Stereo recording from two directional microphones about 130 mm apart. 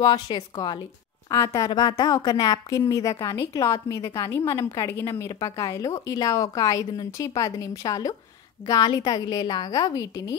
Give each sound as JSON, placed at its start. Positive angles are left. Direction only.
{"t": 0.0, "sound": "a woman's voice", "side_deg": 35}